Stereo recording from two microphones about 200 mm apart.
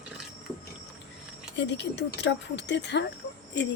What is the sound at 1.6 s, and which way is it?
Speech, 60° left (ahead or behind).